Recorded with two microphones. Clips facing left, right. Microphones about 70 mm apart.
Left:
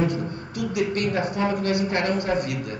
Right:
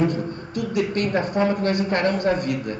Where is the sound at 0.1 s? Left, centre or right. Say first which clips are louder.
Right 2 dB; right.